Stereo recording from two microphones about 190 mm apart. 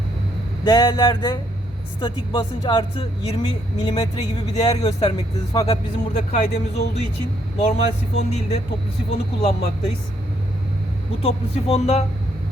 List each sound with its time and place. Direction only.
0.6 s speech: 20° left (ahead or behind)
4.6 s speech: 30° left (ahead or behind)
11.2 s speech: 30° left (ahead or behind)